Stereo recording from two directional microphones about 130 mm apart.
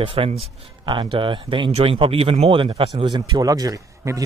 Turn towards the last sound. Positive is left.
turn(degrees=-25)  # may be behind; listen again after turning